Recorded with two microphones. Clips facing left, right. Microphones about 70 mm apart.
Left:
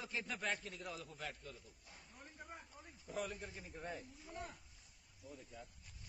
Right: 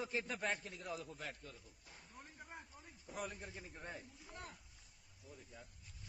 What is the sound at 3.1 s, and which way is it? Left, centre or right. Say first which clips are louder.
Speech: left 2 dB; right.